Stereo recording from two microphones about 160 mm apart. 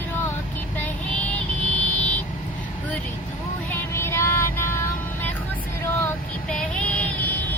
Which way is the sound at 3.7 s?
15° left (ahead or behind).